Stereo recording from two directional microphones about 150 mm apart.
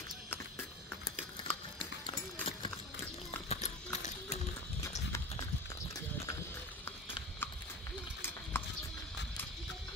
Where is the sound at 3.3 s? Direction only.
45° left (ahead or behind).